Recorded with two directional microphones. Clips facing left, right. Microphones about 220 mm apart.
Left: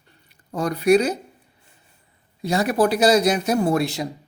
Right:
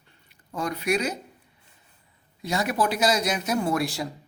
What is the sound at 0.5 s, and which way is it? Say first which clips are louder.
Speech: left 9 dB; 35° left (ahead or behind).